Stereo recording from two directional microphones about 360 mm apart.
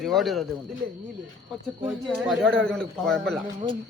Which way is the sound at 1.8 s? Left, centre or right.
Centre.